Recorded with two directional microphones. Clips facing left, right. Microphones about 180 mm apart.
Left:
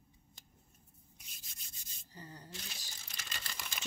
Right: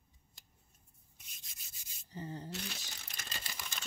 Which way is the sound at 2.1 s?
25° right (ahead or behind).